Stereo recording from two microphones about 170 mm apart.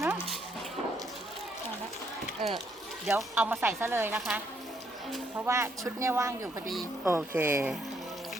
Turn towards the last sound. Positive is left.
turn(degrees=-15)  # may be behind; listen again after turning